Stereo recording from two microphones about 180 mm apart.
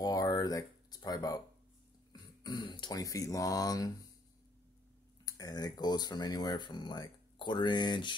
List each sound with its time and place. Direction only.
0.0 s a sound: 20° left (ahead or behind)
2.4 s speech: 25° left (ahead or behind)
5.2 s speech: 20° left (ahead or behind)